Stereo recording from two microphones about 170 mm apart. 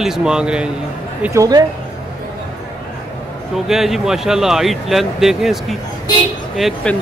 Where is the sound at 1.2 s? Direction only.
20° right (ahead or behind).